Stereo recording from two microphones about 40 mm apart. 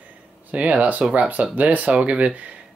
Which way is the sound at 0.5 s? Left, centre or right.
Right.